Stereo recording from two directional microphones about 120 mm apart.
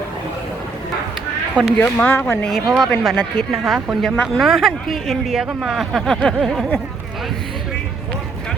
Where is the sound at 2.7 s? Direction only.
5° left (ahead or behind).